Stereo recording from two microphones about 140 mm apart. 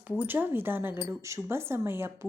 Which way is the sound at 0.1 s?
15° right (ahead or behind).